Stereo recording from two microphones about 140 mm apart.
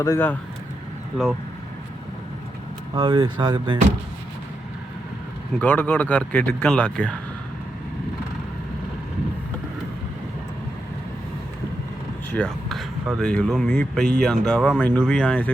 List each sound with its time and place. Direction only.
0.0 s speech: 20° left (ahead or behind)
2.9 s speech: 35° right (ahead or behind)
5.5 s speech: 10° left (ahead or behind)
12.3 s speech: 5° left (ahead or behind)